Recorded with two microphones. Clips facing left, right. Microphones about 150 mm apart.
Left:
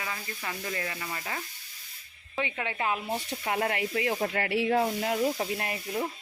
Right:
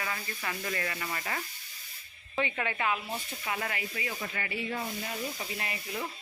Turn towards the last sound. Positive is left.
turn(degrees=45)  # may be behind; listen again after turning